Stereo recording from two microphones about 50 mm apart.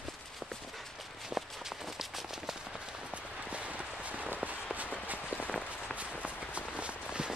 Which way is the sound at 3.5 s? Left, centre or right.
Right.